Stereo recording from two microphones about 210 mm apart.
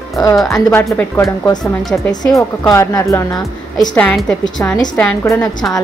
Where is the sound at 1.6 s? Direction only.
Centre (ahead or behind).